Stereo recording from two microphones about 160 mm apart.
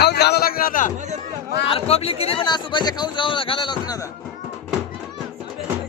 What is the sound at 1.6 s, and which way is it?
A man's voice, 40° left (ahead or behind).